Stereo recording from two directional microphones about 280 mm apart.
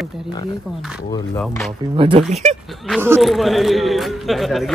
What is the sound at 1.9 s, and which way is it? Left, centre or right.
Speech, centre.